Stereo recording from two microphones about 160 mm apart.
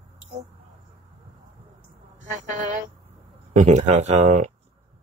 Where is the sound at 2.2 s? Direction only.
55° right (ahead or behind).